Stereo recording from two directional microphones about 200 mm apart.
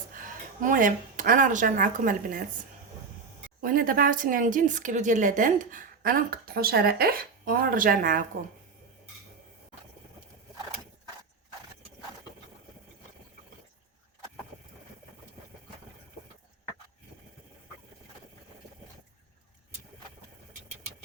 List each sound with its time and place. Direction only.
0.2 s a woman's voice: 45° right (ahead or behind)
3.6 s speech: 45° right (ahead or behind)